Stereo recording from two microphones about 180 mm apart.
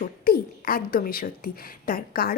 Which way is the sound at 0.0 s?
55° left (ahead or behind).